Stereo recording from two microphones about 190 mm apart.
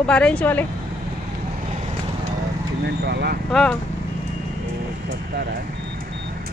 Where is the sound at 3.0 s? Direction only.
60° right (ahead or behind).